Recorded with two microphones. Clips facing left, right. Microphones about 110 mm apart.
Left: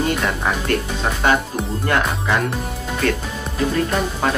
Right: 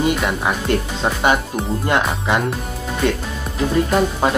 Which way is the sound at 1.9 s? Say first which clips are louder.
Right 1 dB; 20° right (ahead or behind).